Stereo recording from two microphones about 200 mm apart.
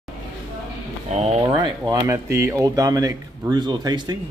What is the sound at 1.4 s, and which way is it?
Speech, 20° right (ahead or behind).